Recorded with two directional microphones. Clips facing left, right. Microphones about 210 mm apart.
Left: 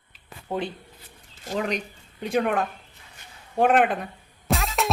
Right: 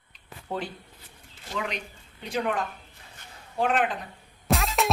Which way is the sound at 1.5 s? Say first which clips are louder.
Left 6 dB; 45° left (ahead or behind).